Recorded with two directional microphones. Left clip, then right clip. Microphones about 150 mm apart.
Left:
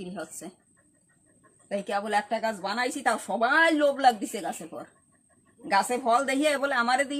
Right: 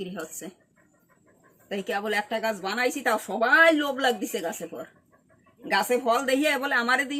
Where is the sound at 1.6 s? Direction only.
30° left (ahead or behind).